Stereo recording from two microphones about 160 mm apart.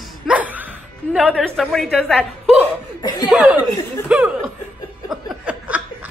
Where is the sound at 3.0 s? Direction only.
25° left (ahead or behind).